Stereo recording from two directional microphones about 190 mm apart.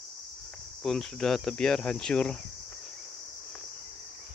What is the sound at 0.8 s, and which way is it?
Cricket, centre (ahead or behind).